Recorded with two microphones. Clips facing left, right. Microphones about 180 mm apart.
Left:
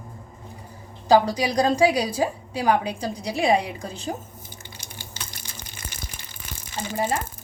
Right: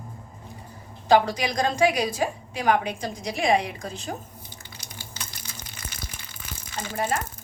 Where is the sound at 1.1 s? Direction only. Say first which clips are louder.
Left 2 dB; 35° left (ahead or behind).